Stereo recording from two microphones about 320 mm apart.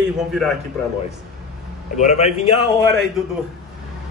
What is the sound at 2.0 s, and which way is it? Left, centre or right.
Speech, left.